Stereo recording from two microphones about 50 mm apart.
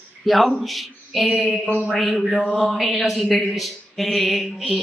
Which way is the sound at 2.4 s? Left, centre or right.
Centre.